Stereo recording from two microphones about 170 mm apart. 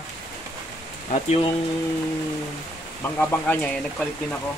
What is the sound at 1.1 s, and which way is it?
Speech, 35° left (ahead or behind).